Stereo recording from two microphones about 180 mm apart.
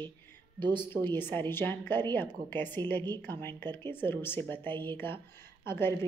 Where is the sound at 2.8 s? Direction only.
25° right (ahead or behind).